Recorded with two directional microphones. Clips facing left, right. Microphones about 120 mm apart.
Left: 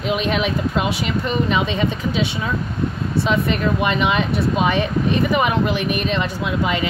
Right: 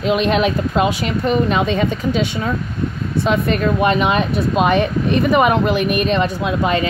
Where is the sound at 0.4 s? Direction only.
45° right (ahead or behind).